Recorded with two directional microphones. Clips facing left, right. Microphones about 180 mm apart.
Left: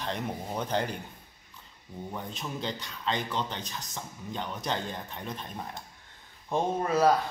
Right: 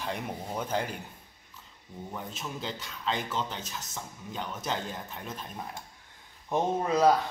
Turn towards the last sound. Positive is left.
turn(degrees=-15)  # may be behind; listen again after turning